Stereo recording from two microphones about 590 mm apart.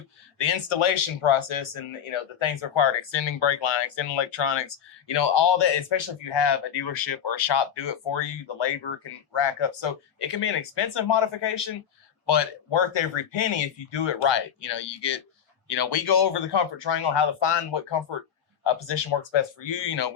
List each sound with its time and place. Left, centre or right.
0.3 s speech: left